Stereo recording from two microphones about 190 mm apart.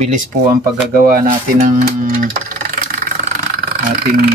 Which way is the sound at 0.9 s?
50° right (ahead or behind).